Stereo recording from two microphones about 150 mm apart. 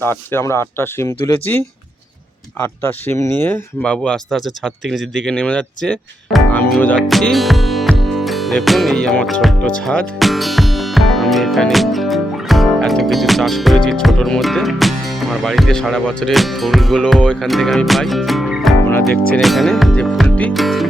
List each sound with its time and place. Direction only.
0.0 s speech: 15° left (ahead or behind)
20.2 s music: 10° left (ahead or behind)